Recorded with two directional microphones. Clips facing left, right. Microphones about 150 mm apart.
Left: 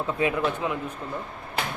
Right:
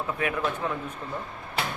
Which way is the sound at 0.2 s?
20° left (ahead or behind).